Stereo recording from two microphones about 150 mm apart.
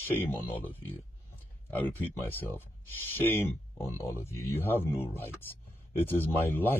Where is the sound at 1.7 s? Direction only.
10° left (ahead or behind).